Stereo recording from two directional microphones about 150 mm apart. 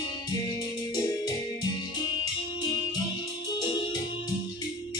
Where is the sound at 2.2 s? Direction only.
25° left (ahead or behind).